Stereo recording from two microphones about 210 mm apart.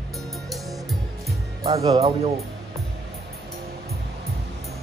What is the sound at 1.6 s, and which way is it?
Speech, 15° right (ahead or behind).